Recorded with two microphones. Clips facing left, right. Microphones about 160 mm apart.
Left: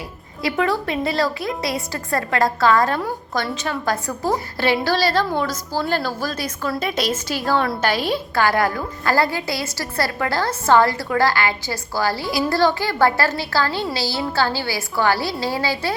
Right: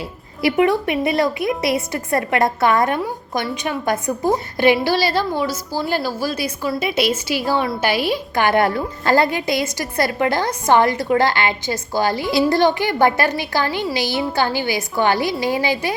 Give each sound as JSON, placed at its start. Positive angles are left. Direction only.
{"t": 0.4, "sound": "a woman's voice", "side_deg": -20}